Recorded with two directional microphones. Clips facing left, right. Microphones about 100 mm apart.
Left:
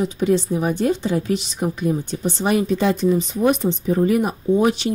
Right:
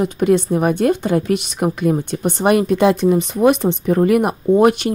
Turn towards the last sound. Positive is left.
turn(degrees=-55)  # may be behind; listen again after turning